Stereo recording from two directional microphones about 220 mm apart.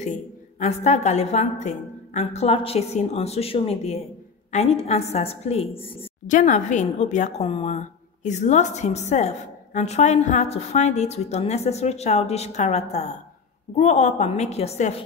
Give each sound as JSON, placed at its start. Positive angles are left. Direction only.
{"t": 0.6, "sound": "a woman's voice", "side_deg": 30}